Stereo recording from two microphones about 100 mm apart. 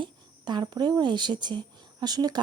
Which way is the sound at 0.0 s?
50° right (ahead or behind).